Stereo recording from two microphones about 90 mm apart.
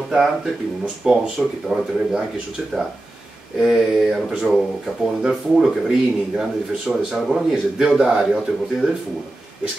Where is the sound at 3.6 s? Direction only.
5° right (ahead or behind).